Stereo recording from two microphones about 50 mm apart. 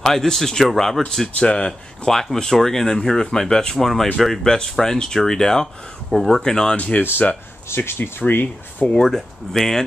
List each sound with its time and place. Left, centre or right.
0.0 s speech: centre
1.4 s speech: left
1.7 s speech: centre
7.0 s speech: left
8.2 s speech: left
8.8 s speech: centre